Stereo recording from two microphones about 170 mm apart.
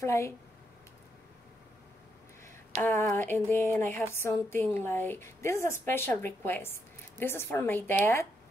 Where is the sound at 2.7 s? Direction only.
10° left (ahead or behind).